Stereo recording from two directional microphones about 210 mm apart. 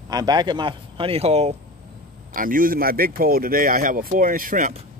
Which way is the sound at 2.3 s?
40° right (ahead or behind).